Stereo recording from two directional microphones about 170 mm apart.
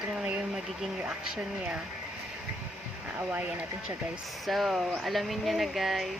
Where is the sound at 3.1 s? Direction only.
10° right (ahead or behind).